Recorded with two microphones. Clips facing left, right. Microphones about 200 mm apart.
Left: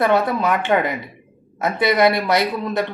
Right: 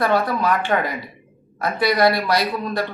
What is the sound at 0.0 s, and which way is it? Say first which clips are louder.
Speech: left 2 dB; 20° left (ahead or behind).